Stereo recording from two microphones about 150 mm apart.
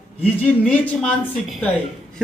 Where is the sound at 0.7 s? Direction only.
10° left (ahead or behind).